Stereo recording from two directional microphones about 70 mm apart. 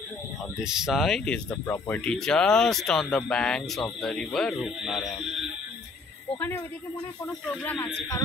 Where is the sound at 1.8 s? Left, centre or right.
Centre.